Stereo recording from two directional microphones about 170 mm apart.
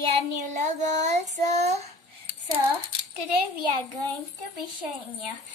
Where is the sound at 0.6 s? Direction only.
45° right (ahead or behind).